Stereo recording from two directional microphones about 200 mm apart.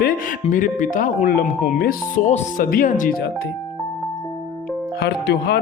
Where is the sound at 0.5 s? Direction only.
40° left (ahead or behind).